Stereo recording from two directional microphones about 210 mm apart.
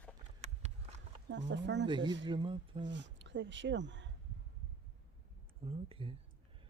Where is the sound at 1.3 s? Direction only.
55° right (ahead or behind).